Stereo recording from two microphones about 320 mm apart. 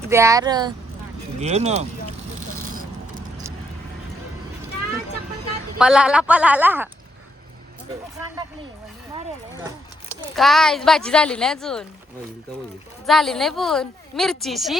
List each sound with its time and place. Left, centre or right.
0.1 s speech: centre
2.6 s vehicle: right
5.8 s speech: centre
10.1 s speech: centre
13.1 s speech: centre